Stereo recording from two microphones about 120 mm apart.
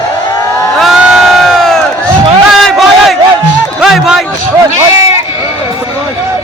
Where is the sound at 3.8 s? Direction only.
5° right (ahead or behind).